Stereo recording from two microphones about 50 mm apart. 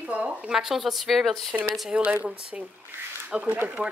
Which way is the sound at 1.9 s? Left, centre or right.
Right.